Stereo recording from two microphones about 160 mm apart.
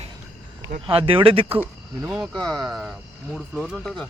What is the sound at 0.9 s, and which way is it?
Speech, 35° right (ahead or behind).